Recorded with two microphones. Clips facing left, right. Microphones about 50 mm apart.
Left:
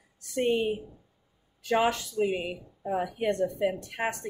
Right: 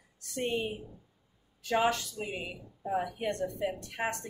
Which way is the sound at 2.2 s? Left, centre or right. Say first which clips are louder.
Left 9 dB; left.